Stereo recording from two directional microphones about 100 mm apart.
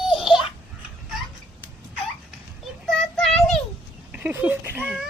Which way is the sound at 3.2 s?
5° left (ahead or behind).